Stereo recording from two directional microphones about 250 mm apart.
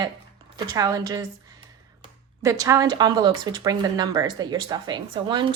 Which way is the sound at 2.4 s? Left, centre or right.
Centre.